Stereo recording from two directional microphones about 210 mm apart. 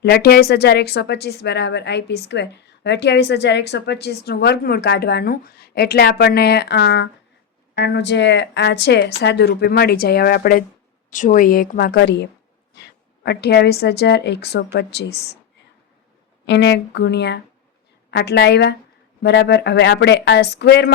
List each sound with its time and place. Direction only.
0.0 s speech: 50° left (ahead or behind)
16.5 s speech: 55° left (ahead or behind)